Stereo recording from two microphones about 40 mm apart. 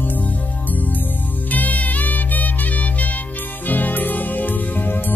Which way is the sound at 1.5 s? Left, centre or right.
Left.